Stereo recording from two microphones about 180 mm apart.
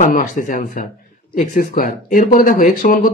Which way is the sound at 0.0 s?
45° left (ahead or behind).